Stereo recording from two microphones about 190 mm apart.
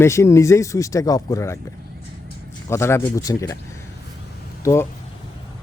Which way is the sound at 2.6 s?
15° left (ahead or behind).